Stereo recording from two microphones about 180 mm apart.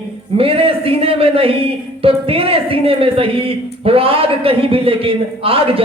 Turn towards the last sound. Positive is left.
turn(degrees=-30)  # may be behind; listen again after turning